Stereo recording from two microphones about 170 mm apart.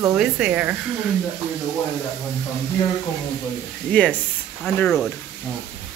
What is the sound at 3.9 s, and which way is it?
Speech, 5° left (ahead or behind).